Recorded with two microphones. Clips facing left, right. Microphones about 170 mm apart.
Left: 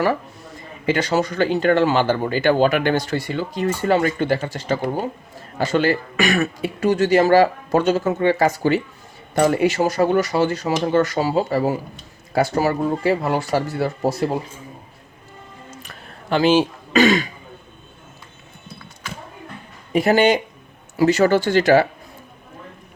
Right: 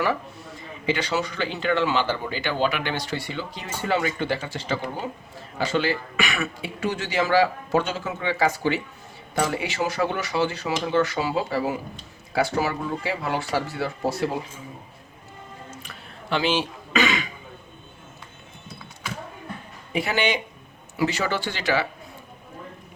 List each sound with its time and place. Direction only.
0.9 s speech: 45° left (ahead or behind)
15.8 s throat clearing: 45° left (ahead or behind)
19.9 s speech: 45° left (ahead or behind)